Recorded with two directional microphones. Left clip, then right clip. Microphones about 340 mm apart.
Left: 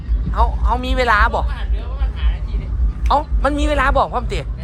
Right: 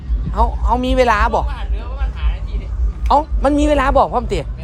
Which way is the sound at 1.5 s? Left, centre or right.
Centre.